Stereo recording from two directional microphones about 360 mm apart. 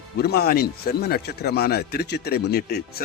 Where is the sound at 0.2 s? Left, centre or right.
Left.